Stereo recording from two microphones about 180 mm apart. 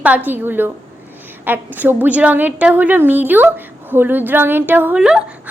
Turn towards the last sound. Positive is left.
turn(degrees=-5)  # may be behind; listen again after turning